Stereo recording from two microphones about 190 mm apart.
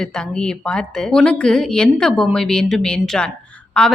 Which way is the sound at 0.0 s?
5° left (ahead or behind).